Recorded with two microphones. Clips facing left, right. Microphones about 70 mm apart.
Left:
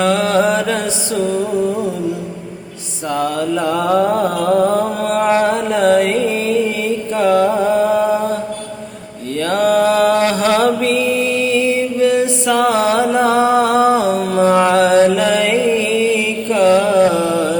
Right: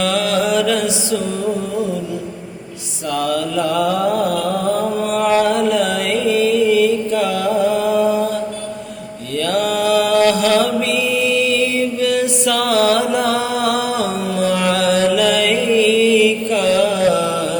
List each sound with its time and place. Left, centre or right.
0.0 s mantra: left
3.1 s music: left
9.3 s mantra: left